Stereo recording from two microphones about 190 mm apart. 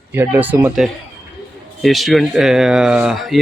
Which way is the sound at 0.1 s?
10° right (ahead or behind).